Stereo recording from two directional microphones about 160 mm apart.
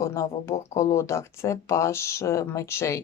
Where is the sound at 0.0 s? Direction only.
20° left (ahead or behind).